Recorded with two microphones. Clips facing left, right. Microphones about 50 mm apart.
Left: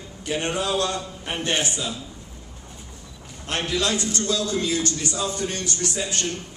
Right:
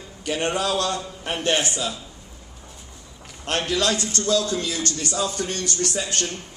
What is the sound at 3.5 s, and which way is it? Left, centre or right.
Speech, right.